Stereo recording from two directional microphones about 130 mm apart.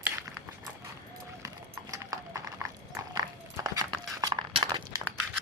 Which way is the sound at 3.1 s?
30° right (ahead or behind).